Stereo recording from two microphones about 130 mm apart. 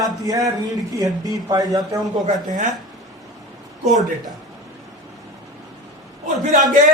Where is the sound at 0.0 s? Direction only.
25° right (ahead or behind).